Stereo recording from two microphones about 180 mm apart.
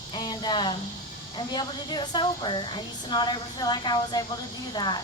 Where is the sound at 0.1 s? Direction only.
25° left (ahead or behind).